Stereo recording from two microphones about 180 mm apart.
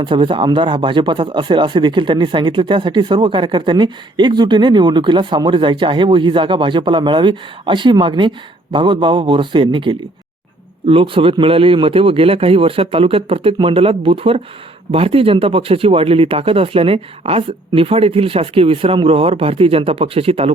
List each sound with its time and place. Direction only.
0.0 s speech: 25° right (ahead or behind)